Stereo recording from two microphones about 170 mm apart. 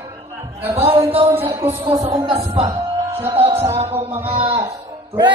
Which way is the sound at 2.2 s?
30° right (ahead or behind).